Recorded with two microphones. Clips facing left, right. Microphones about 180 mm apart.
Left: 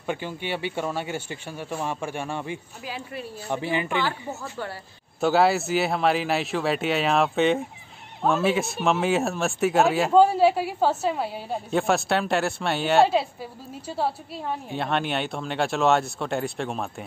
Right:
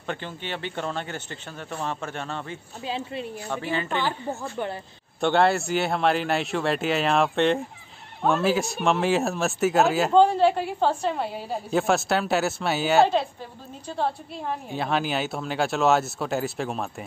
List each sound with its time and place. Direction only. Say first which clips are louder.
0.0 s speech: left 3 dB; 10° left (ahead or behind)
2.8 s a woman's voice: right 4 dB; 25° right (ahead or behind)
3.4 s speech: left 4 dB; 15° left (ahead or behind)
5.2 s speech: left 1 dB; 5° left (ahead or behind)